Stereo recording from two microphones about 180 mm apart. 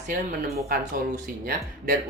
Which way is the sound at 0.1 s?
50° right (ahead or behind).